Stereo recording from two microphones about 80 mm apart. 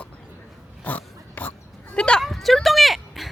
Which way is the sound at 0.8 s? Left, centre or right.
Left.